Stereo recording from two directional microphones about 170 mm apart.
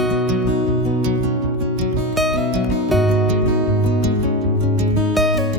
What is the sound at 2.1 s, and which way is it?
Music, centre (ahead or behind).